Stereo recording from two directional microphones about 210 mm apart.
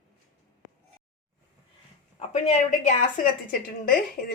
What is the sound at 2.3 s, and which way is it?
A woman's voice, 35° left (ahead or behind).